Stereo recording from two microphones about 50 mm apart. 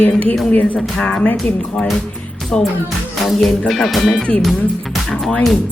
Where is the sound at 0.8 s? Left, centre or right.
Centre.